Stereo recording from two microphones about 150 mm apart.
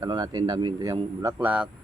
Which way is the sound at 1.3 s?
10° right (ahead or behind).